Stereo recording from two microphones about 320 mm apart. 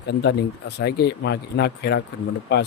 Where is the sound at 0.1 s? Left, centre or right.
Left.